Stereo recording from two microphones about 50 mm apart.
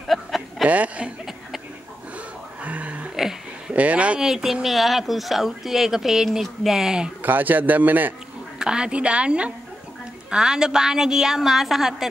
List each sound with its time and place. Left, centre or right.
0.1 s a sound: centre
0.7 s a woman's voice: right
2.1 s music: right
3.2 s a sound: centre
3.7 s a woman's voice: right
4.2 s a woman's voice: centre
7.2 s a man's voice: right
8.5 s a woman's voice: centre